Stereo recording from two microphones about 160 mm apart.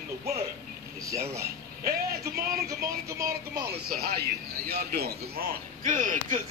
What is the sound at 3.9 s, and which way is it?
A man's voice, 80° right.